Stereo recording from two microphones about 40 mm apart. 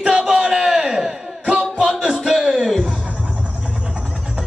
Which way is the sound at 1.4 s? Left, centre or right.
Right.